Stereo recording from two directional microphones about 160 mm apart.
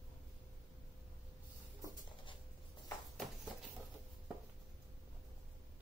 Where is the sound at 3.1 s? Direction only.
Centre (ahead or behind).